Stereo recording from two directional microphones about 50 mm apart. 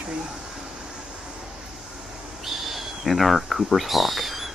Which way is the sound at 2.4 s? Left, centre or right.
Centre.